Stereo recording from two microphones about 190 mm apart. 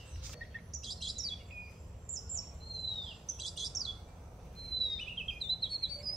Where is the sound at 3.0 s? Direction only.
Centre (ahead or behind).